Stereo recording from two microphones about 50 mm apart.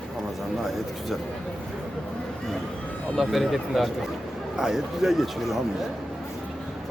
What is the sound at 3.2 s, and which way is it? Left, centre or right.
Speech, centre.